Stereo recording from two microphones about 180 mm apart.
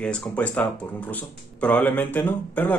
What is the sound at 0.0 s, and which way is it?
Speech, 5° left (ahead or behind).